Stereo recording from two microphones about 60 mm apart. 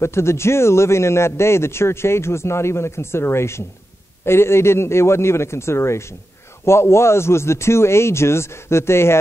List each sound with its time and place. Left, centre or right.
0.0 s a man's voice: left